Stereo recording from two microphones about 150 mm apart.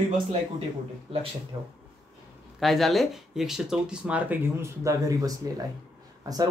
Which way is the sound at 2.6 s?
Centre (ahead or behind).